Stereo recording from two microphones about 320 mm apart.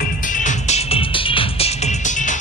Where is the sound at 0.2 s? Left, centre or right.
Left.